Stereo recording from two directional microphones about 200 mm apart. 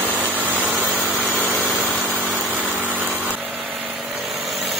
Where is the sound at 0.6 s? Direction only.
5° right (ahead or behind).